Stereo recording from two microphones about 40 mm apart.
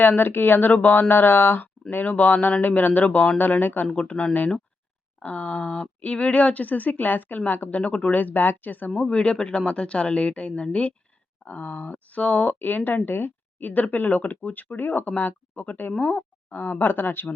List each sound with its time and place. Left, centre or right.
0.0 s speech: left
1.9 s speech: left
3.9 s speech: left
7.8 s speech: left
9.0 s speech: left
11.4 s speech: left
12.5 s speech: left
16.0 s speech: left
16.5 s speech: left